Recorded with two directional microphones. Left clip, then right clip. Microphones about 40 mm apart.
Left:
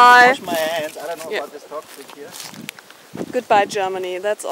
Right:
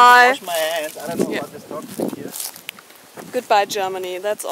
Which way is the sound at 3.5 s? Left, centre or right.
Centre.